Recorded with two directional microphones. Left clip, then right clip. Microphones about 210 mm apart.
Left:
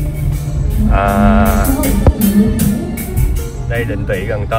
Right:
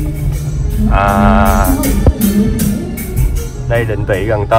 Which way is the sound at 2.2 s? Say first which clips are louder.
Even; 45° left (ahead or behind).